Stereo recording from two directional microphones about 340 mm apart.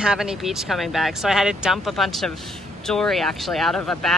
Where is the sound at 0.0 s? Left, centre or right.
Centre.